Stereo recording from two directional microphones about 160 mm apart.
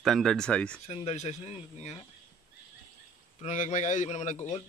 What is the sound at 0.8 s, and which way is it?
Speech, 40° left (ahead or behind).